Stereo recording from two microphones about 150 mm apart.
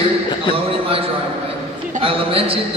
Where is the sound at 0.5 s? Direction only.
40° right (ahead or behind).